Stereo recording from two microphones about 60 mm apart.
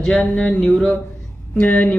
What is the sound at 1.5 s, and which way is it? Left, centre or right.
Speech, left.